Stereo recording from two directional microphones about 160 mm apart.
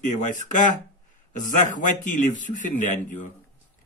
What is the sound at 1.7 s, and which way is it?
A man's voice, 55° left (ahead or behind).